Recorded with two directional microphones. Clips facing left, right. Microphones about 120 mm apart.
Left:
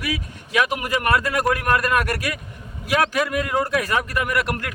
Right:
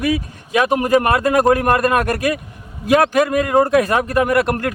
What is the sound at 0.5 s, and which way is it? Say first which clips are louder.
Speech: right 7 dB; 35° right (ahead or behind).